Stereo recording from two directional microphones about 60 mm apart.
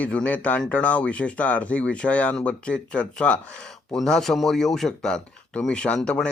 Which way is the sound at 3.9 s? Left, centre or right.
Centre.